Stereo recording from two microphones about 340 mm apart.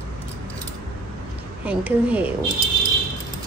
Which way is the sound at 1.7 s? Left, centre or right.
Centre.